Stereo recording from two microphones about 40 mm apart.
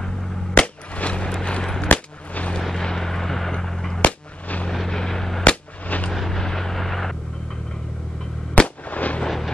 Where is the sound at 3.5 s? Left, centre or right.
Centre.